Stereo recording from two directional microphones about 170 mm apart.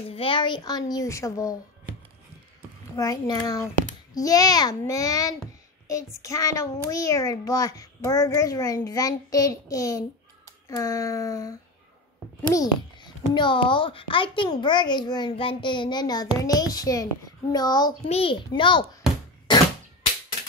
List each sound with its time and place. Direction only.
0.1 s a child's voice: 30° left (ahead or behind)
3.0 s a child's voice: 20° left (ahead or behind)
18.0 s a child's voice: 35° left (ahead or behind)